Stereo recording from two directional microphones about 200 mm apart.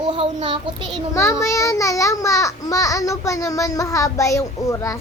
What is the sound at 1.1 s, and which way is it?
A child's voice, 15° left (ahead or behind).